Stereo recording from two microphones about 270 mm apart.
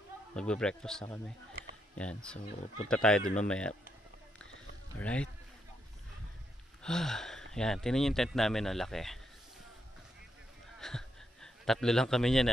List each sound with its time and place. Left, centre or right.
0.3 s speech: centre
2.3 s speech: left
2.9 s speech: centre
4.9 s speech: centre
6.8 s speech: centre
10.8 s a sound: centre